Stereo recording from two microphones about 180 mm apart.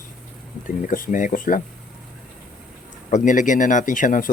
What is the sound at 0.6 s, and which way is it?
Speech, 50° left (ahead or behind).